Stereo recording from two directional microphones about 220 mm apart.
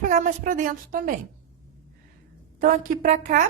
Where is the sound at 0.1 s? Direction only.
35° right (ahead or behind).